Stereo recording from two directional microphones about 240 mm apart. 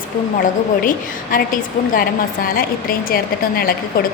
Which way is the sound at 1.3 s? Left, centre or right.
Left.